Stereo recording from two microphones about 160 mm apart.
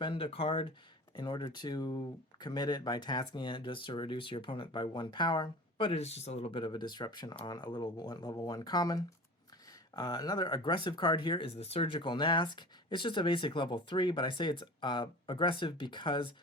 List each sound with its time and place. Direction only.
0.0 s speech: 35° left (ahead or behind)